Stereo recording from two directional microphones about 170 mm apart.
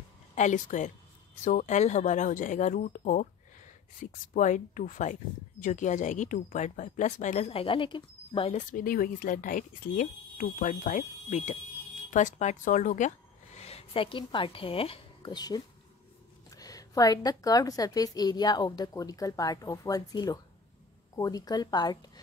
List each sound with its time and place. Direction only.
0.4 s speech: 45° left (ahead or behind)
8.5 s speech: 55° left (ahead or behind)
13.6 s a woman's voice: 35° left (ahead or behind)